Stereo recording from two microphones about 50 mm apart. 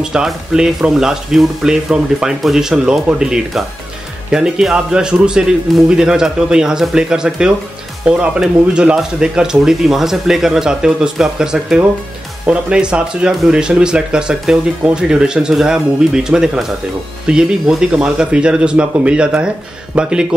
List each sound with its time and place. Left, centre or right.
0.0 s speech: centre